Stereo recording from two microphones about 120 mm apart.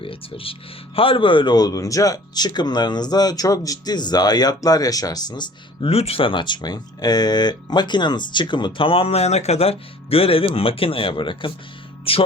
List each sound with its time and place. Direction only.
0.0 s speech: 50° left (ahead or behind)
5.9 s speech: 55° left (ahead or behind)